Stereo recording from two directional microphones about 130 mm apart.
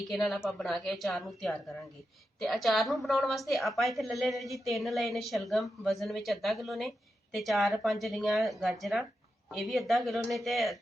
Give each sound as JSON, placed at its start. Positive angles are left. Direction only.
{"t": 0.1, "sound": "a woman's voice", "side_deg": 0}